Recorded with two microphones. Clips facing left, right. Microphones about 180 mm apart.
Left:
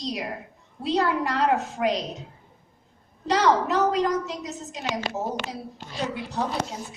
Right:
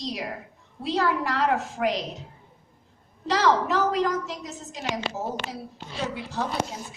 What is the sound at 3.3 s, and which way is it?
A woman's voice, centre (ahead or behind).